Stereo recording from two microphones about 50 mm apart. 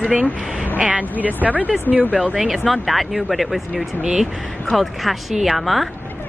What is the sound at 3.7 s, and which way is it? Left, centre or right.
Speech, centre.